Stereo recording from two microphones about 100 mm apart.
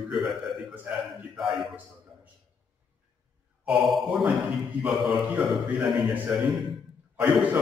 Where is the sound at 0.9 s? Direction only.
20° right (ahead or behind).